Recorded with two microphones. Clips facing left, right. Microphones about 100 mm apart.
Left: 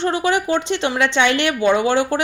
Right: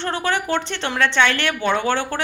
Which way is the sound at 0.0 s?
15° left (ahead or behind).